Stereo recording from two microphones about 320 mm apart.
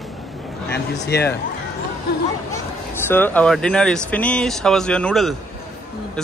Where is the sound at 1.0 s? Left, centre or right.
Left.